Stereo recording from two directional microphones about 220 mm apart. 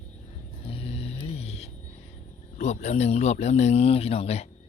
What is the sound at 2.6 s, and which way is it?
Speech, 30° left (ahead or behind).